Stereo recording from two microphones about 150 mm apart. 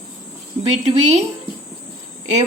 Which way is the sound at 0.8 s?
45° right (ahead or behind).